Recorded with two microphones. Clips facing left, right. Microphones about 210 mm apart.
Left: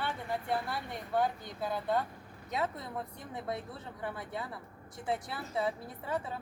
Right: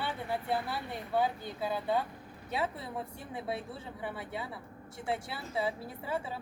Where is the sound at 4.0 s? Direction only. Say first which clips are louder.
Left 1 dB; 5° right (ahead or behind).